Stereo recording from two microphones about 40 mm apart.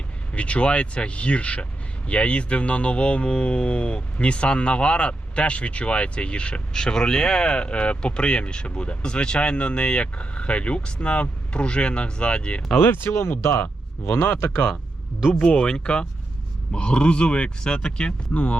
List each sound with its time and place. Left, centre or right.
0.3 s speech: left
6.7 s speech: centre
12.7 s speech: left
13.6 s speech: left
15.5 s speech: centre
18.3 s speech: left